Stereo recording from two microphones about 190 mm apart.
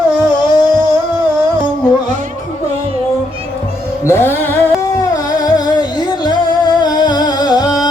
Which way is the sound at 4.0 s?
15° left (ahead or behind).